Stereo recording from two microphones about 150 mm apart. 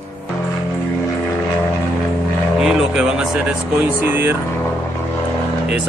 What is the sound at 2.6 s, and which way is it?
Speech, 5° right (ahead or behind).